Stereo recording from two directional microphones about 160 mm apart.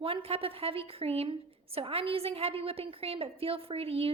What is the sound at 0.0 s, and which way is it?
A woman's voice, 35° right (ahead or behind).